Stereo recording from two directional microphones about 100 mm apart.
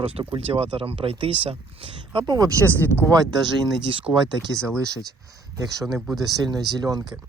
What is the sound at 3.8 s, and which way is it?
Speech, 60° right (ahead or behind).